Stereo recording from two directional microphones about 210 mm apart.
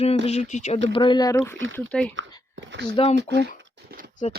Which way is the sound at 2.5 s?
60° right (ahead or behind).